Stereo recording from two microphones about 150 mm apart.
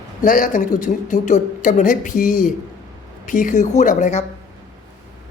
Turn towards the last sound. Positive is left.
turn(degrees=50)  # may be behind; listen again after turning